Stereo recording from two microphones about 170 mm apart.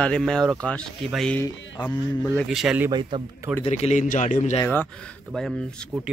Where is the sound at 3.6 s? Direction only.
40° left (ahead or behind).